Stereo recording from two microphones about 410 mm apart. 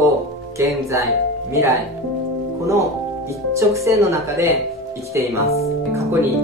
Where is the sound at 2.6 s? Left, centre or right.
Centre.